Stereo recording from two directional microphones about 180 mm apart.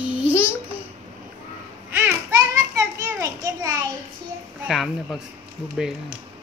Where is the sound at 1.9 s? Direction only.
15° right (ahead or behind).